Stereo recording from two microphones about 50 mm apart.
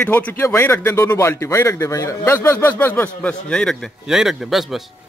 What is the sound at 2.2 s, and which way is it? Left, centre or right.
Speech, left.